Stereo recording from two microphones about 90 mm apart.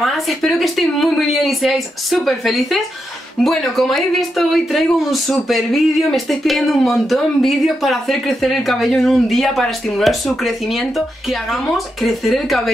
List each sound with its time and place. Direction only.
0.0 s speech: centre (ahead or behind)